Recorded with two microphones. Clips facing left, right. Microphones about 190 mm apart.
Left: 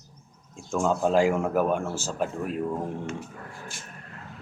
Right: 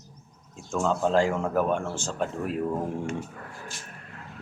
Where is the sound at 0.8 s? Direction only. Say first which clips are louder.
Left 1 dB; 10° left (ahead or behind).